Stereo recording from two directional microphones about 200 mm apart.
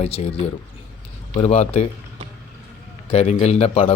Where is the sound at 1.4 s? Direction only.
35° left (ahead or behind).